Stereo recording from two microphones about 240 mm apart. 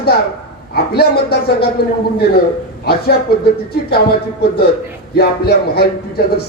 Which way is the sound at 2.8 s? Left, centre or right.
Left.